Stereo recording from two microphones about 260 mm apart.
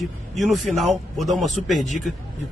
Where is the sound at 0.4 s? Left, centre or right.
Centre.